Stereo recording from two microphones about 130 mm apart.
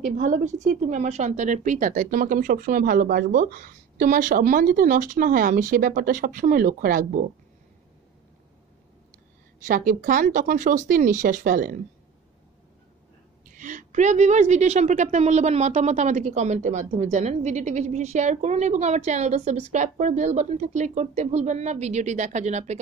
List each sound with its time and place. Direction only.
0.2 s speech: 75° right (ahead or behind)
9.7 s speech: 90° right
13.5 s a woman's voice: 80° right; by 22.8 s 60° right (ahead or behind)